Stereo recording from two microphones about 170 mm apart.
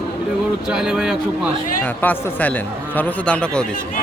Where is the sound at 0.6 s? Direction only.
5° right (ahead or behind).